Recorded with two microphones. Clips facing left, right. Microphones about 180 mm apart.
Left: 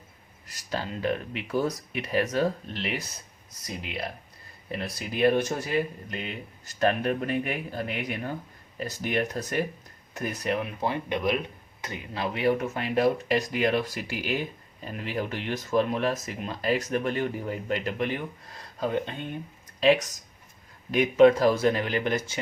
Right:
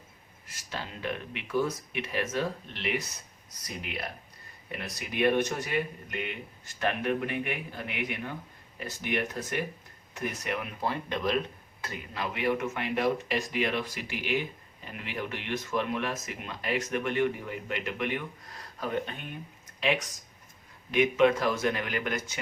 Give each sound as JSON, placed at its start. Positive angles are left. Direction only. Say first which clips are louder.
{"t": 0.4, "sound": "speech", "louder": "left 7 dB", "side_deg": 40}
{"t": 4.7, "sound": "speech", "louder": "left 4 dB", "side_deg": 30}
{"t": 12.1, "sound": "speech", "louder": "left 4 dB", "side_deg": 35}